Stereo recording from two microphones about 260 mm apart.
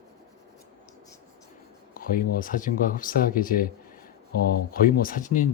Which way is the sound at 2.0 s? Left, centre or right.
Left.